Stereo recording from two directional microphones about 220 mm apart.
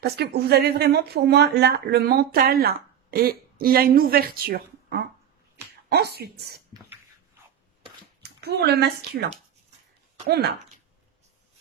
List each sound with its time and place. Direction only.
0.0 s speech: 45° right (ahead or behind)
8.2 s speech: 45° right (ahead or behind)
10.2 s speech: 45° right (ahead or behind)